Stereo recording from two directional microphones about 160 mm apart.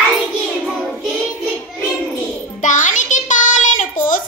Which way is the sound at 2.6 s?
50° left (ahead or behind).